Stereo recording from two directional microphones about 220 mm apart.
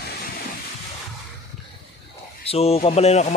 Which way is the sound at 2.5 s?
25° left (ahead or behind).